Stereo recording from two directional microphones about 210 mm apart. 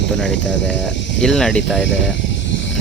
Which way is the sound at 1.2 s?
Centre (ahead or behind).